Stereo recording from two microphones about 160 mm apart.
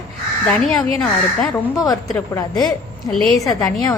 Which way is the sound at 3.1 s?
Centre (ahead or behind).